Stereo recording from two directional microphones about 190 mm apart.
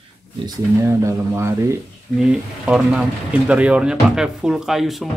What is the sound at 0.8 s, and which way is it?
Speech, 15° right (ahead or behind).